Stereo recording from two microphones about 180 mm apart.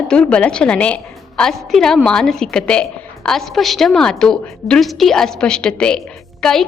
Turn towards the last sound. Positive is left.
turn(degrees=5)  # may be behind; listen again after turning